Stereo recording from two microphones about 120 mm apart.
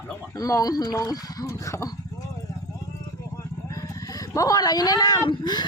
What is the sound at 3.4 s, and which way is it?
Speech, 30° left (ahead or behind).